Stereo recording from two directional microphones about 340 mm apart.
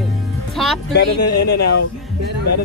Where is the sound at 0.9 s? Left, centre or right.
Left.